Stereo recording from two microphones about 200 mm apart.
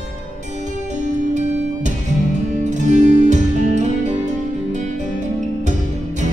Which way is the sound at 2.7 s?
35° right (ahead or behind).